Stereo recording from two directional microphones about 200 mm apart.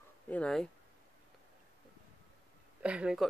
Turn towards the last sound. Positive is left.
turn(degrees=-5)  # may be behind; listen again after turning